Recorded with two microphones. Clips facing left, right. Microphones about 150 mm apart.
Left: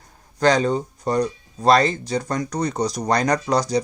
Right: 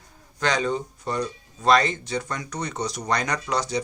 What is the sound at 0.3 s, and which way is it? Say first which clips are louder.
Speech: left 6 dB; 35° left (ahead or behind).